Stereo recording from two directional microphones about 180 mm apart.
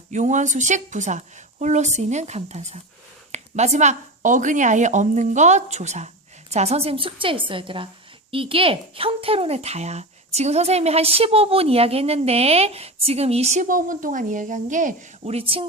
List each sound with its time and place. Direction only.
0.1 s a woman's voice: 40° right (ahead or behind)